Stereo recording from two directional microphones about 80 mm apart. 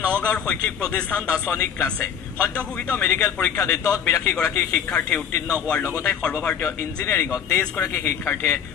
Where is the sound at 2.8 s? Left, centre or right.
Left.